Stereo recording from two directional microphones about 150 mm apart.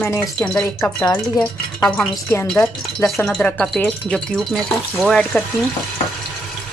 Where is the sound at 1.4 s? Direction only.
Centre (ahead or behind).